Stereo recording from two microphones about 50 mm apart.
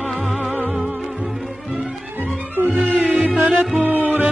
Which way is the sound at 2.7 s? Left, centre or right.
Right.